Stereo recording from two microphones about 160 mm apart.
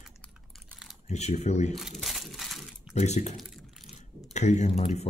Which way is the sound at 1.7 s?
Centre (ahead or behind).